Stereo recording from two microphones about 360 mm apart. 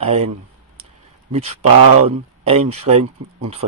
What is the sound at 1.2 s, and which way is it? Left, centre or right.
Speech, centre.